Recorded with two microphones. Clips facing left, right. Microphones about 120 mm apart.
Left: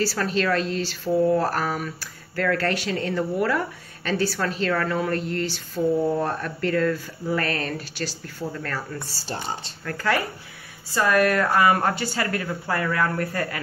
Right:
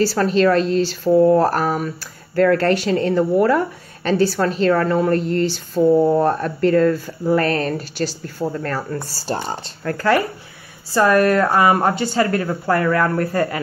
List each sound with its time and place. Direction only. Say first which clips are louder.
0.0 s speech: right 8 dB; 30° right (ahead or behind)
1.0 s speech: right 7 dB; 50° right (ahead or behind)
1.4 s speech: right 7 dB; 35° right (ahead or behind)
5.9 s speech: right 8 dB; 55° right (ahead or behind)
6.2 s speech: right 8 dB; 35° right (ahead or behind)
12.4 s speech: right 8 dB; 50° right (ahead or behind); by 13.6 s 30° right (ahead or behind)